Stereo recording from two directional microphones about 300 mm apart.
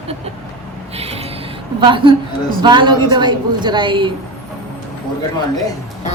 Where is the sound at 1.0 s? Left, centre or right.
Centre.